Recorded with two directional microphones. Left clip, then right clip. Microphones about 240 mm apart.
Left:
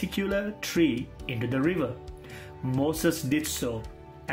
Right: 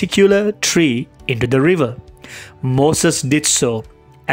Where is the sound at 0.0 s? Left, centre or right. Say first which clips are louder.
Right 17 dB; right.